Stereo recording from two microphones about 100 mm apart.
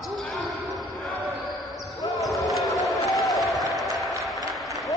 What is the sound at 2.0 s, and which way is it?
Basketball bounce, 35° left (ahead or behind).